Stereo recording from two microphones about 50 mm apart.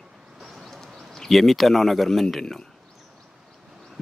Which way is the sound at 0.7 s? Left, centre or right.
Centre.